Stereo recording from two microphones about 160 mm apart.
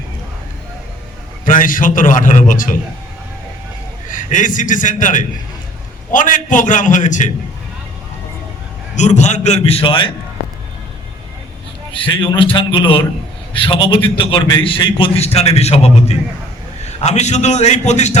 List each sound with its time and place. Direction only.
1.5 s a man's voice: 60° left (ahead or behind)
4.1 s a man's voice: 55° left (ahead or behind)
9.0 s a man's voice: 45° left (ahead or behind)
11.9 s a man's voice: 30° left (ahead or behind)